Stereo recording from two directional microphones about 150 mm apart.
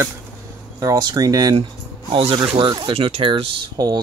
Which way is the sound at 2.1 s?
35° right (ahead or behind).